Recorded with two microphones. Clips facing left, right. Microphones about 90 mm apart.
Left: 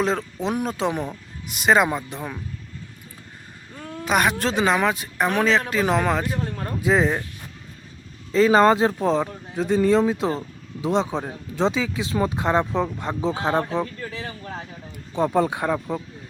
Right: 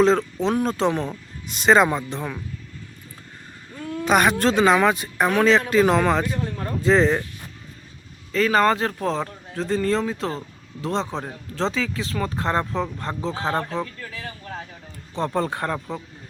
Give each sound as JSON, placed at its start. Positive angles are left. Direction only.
{"t": 0.0, "sound": "speech", "side_deg": 5}
{"t": 4.0, "sound": "speech", "side_deg": 0}
{"t": 8.3, "sound": "speech", "side_deg": 20}
{"t": 13.8, "sound": "speech", "side_deg": 30}
{"t": 15.1, "sound": "speech", "side_deg": 10}